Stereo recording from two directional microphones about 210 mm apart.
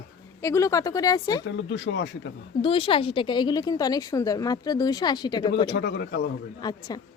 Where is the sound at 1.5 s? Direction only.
60° left (ahead or behind).